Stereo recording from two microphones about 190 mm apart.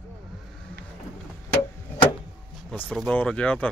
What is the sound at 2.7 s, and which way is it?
Speech, 5° left (ahead or behind).